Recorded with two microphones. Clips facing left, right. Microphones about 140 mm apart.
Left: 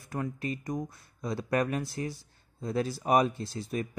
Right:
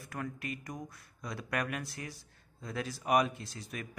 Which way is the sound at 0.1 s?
30° left (ahead or behind).